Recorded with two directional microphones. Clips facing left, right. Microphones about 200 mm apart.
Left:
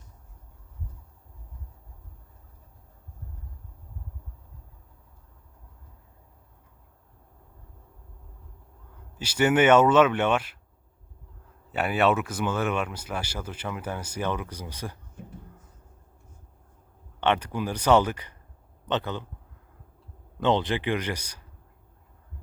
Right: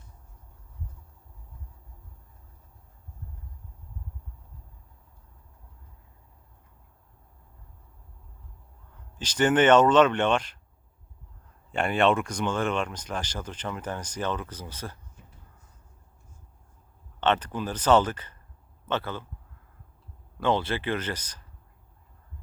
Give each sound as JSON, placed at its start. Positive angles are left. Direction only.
{"t": 9.1, "sound": "speech", "side_deg": 10}
{"t": 11.7, "sound": "speech", "side_deg": 5}
{"t": 15.2, "sound": "a sound", "side_deg": 55}
{"t": 17.2, "sound": "speech", "side_deg": 10}
{"t": 20.4, "sound": "speech", "side_deg": 20}